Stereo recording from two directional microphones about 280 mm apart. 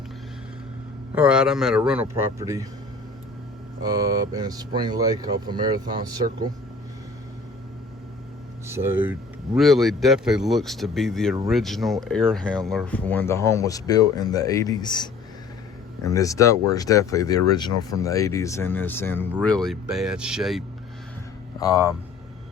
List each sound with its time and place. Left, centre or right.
1.1 s speech: centre
3.8 s speech: centre
8.6 s speech: centre